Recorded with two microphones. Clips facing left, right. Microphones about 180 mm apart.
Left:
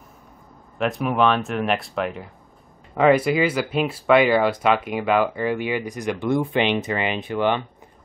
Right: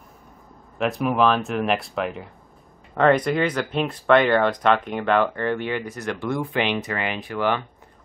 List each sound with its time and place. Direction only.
0.7 s speech: centre (ahead or behind); by 7.6 s 20° left (ahead or behind)